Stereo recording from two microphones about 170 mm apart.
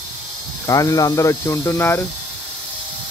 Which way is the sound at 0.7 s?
20° left (ahead or behind).